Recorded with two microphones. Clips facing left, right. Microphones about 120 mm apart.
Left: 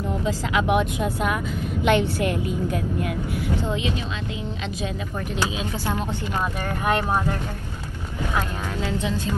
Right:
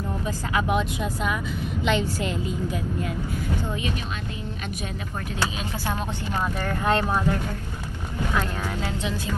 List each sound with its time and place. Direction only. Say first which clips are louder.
1.0 s speech: left 3 dB; 5° left (ahead or behind)
1.8 s a woman's voice: left 5 dB; 60° left (ahead or behind)
3.1 s speech: left 3 dB; 80° left
6.8 s speech: left 1 dB; 15° left (ahead or behind)
9.0 s speech: left 3 dB; 10° right (ahead or behind)